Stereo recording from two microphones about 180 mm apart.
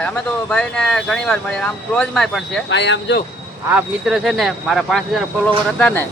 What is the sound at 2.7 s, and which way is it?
Speech, 80° left.